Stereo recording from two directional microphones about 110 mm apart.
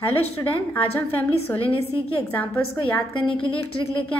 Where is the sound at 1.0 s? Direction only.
15° left (ahead or behind).